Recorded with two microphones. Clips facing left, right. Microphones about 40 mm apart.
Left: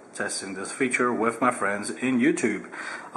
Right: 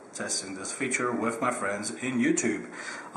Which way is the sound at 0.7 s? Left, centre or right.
Centre.